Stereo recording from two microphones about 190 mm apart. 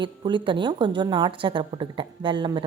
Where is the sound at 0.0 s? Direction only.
25° right (ahead or behind).